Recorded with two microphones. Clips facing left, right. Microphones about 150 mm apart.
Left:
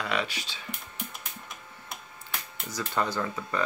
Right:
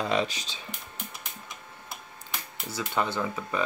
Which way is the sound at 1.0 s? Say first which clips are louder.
Left 1 dB; centre (ahead or behind).